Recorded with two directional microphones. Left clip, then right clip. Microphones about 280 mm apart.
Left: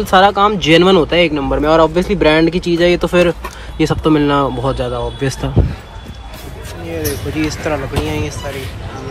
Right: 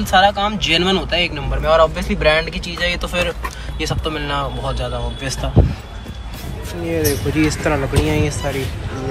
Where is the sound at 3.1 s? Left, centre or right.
Left.